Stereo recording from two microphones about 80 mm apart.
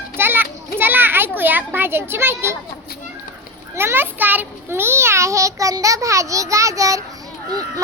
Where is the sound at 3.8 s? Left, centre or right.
Right.